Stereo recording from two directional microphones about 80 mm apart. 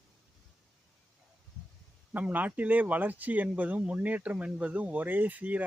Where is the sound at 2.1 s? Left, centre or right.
Right.